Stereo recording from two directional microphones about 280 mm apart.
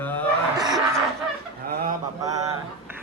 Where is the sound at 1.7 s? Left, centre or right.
Right.